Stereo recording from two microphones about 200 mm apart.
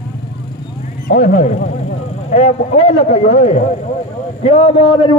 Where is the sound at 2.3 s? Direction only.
35° left (ahead or behind).